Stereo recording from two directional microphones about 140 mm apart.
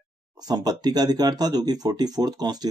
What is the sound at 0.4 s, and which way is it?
Speech, 30° right (ahead or behind).